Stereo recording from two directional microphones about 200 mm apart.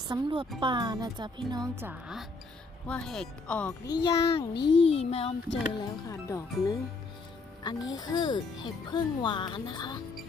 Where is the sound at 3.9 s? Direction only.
25° left (ahead or behind).